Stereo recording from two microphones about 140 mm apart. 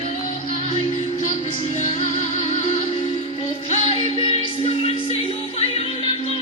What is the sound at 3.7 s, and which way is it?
Music, 40° left (ahead or behind).